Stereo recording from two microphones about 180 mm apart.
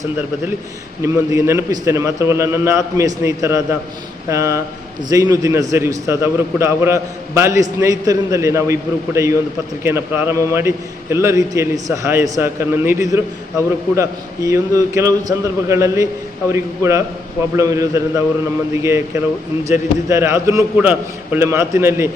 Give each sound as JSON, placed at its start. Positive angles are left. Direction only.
{"t": 1.0, "sound": "a man's voice", "side_deg": -15}
{"t": 20.1, "sound": "a man's voice", "side_deg": -15}